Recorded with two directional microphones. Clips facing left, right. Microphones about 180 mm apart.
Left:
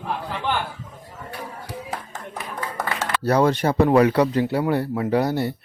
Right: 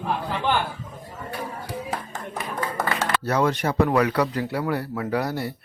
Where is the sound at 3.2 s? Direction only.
35° left (ahead or behind).